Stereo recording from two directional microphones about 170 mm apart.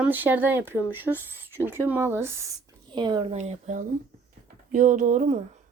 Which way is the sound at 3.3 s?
40° right (ahead or behind).